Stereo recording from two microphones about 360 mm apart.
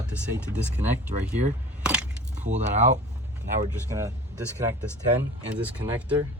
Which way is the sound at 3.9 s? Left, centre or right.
Centre.